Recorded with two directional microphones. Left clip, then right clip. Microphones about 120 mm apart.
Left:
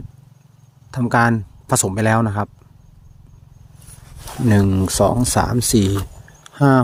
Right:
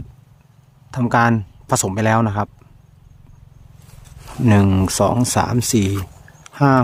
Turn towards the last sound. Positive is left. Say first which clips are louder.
# even
turn(degrees=0)  # may be behind; listen again after turning